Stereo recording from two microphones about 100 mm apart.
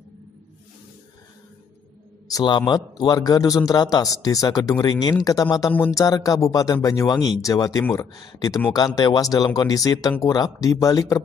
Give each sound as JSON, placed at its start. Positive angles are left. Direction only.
{"t": 2.4, "sound": "a man's voice", "side_deg": 45}